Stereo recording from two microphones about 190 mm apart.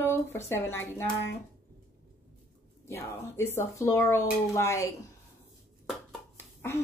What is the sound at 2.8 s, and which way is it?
Speech, 15° left (ahead or behind).